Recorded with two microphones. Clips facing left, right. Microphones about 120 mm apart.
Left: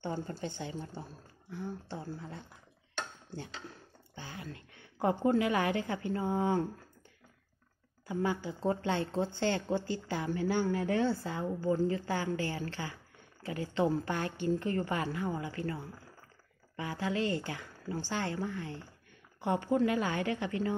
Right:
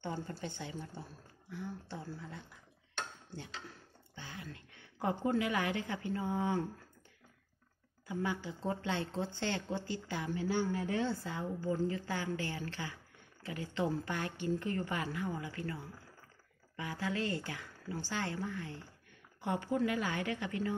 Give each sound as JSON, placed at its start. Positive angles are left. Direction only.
{"t": 0.3, "sound": "a woman's voice", "side_deg": 30}
{"t": 4.1, "sound": "a woman's voice", "side_deg": 35}
{"t": 8.1, "sound": "a woman's voice", "side_deg": 35}
{"t": 10.3, "sound": "speech", "side_deg": 55}
{"t": 11.1, "sound": "a woman's voice", "side_deg": 35}